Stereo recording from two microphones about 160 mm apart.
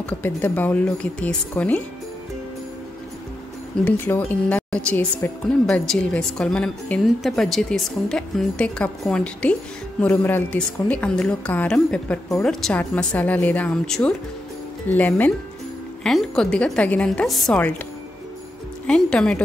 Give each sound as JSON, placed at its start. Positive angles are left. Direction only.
{"t": 0.0, "sound": "a woman's voice", "side_deg": 10}
{"t": 3.8, "sound": "a woman's voice", "side_deg": 15}
{"t": 18.9, "sound": "speech", "side_deg": 5}